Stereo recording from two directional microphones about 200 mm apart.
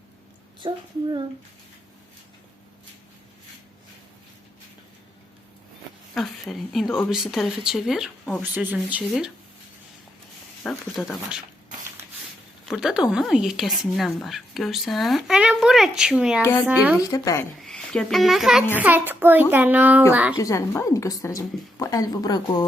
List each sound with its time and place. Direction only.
0.6 s speech: 25° right (ahead or behind)
6.1 s a child's voice: centre (ahead or behind)
10.6 s speech: 5° left (ahead or behind)
12.6 s speech: centre (ahead or behind)
16.4 s a woman's voice: 15° left (ahead or behind)
16.6 s a child's voice: 10° right (ahead or behind)
17.0 s a woman's voice: 15° left (ahead or behind)
17.6 s a child's voice: 5° left (ahead or behind)
20.3 s a woman's voice: 15° left (ahead or behind)